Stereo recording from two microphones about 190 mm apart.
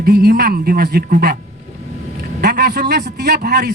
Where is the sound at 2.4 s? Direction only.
60° right (ahead or behind).